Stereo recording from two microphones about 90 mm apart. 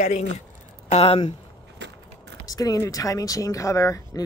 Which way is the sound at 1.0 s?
90° left.